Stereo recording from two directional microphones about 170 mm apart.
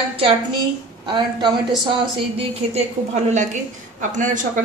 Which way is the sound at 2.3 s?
40° right (ahead or behind).